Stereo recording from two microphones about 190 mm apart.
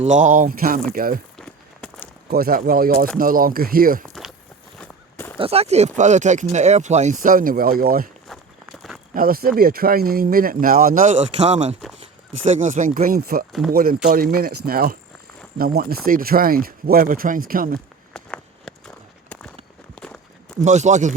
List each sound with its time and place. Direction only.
0.0 s speech: 40° right (ahead or behind)
1.4 s walk: 5° left (ahead or behind)
2.3 s speech: 50° right (ahead or behind)
4.0 s a sound: centre (ahead or behind)
5.4 s speech: 30° right (ahead or behind); by 8.1 s 50° right (ahead or behind)
9.1 s speech: 50° right (ahead or behind)
18.1 s walk: 5° left (ahead or behind)
20.6 s speech: 40° right (ahead or behind)